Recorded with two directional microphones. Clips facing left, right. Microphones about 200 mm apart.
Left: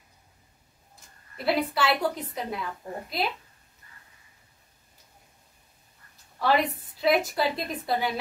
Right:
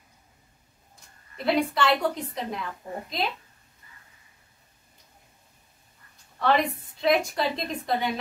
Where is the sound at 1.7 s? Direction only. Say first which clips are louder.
Right 2 dB; 5° left (ahead or behind).